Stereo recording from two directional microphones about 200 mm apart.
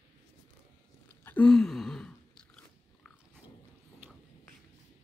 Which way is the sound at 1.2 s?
5° left (ahead or behind).